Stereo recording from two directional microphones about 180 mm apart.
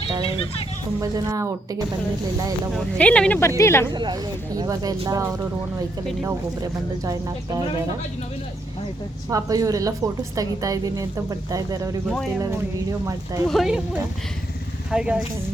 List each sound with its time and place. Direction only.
1.0 s a woman's voice: 20° right (ahead or behind)
2.7 s speech: 5° left (ahead or behind)
3.9 s a woman's voice: 25° right (ahead or behind)
9.3 s a woman's voice: 20° right (ahead or behind)
13.5 s speech: centre (ahead or behind)
14.8 s speech: 5° right (ahead or behind)